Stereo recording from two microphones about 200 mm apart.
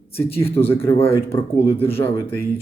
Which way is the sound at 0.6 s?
10° left (ahead or behind).